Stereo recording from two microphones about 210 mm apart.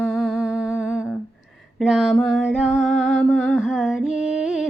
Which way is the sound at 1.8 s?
Centre (ahead or behind).